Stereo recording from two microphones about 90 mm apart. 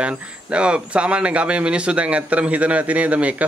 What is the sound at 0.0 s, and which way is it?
Speech, 10° right (ahead or behind).